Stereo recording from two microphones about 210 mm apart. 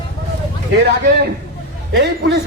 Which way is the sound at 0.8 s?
50° right (ahead or behind).